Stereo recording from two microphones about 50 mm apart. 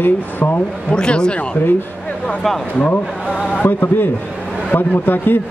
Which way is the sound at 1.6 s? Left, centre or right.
Left.